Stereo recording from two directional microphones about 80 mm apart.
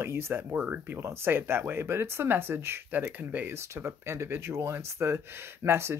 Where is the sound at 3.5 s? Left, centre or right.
Right.